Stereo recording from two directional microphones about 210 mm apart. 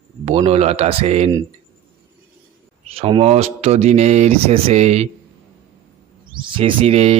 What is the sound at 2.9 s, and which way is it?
Speech, 25° right (ahead or behind).